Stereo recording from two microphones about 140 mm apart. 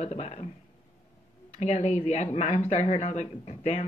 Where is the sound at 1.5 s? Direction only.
50° left (ahead or behind).